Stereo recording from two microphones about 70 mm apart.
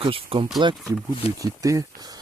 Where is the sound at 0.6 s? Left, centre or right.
Right.